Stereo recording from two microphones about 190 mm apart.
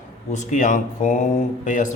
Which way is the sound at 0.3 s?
40° left (ahead or behind).